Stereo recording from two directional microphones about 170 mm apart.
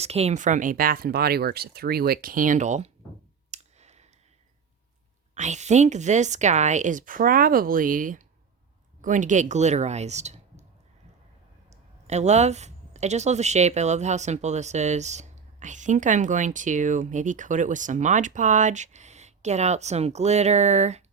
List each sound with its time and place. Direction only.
0.0 s speech: 40° right (ahead or behind)
3.5 s clicking: 40° right (ahead or behind)
5.3 s speech: 45° right (ahead or behind)
11.7 s speech: 40° right (ahead or behind)